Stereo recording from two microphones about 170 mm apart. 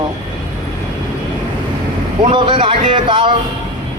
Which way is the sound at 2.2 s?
30° right (ahead or behind).